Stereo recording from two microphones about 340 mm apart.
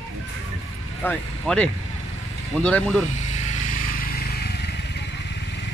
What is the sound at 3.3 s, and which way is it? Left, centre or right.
Vehicle, left.